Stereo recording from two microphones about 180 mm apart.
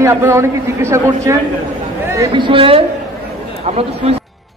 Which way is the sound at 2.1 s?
25° right (ahead or behind).